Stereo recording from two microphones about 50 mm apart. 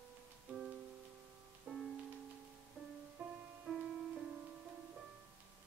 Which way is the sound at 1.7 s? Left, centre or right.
Right.